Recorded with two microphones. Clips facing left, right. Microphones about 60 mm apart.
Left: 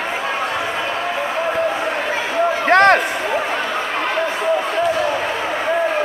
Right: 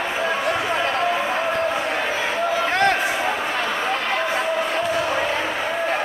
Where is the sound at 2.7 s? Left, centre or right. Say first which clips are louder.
Left 10 dB; left.